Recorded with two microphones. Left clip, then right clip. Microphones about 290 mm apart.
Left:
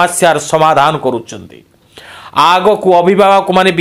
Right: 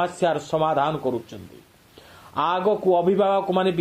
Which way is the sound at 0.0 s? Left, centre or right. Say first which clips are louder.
Left 13 dB; left.